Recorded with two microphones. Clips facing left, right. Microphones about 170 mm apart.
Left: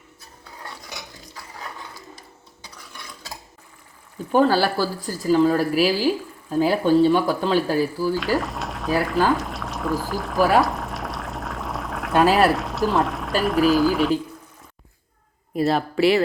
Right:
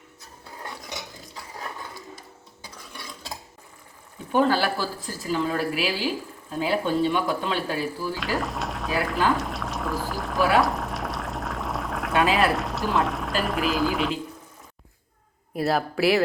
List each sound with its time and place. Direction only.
4.3 s speech: 40° left (ahead or behind)
8.1 s speech: centre (ahead or behind)
10.6 s boiling: centre (ahead or behind)
12.3 s speech: centre (ahead or behind)
15.5 s speech: 5° right (ahead or behind)